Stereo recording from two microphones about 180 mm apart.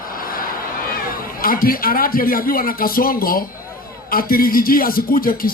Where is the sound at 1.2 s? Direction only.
55° left (ahead or behind).